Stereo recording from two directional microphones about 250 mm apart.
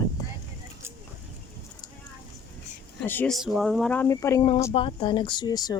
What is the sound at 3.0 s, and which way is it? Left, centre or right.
Speech, centre.